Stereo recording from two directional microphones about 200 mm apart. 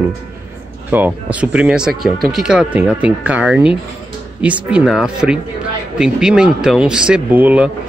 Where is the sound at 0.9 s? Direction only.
10° right (ahead or behind).